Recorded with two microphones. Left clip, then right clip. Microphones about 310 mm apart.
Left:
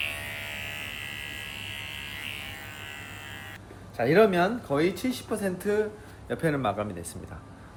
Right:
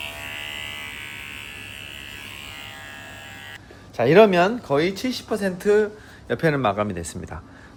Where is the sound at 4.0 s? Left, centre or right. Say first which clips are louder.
Right 7 dB; right.